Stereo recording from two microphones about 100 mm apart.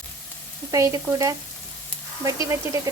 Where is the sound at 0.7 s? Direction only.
30° right (ahead or behind).